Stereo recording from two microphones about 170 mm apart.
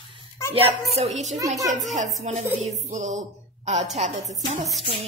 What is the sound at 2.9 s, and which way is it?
A woman's voice, 45° right (ahead or behind).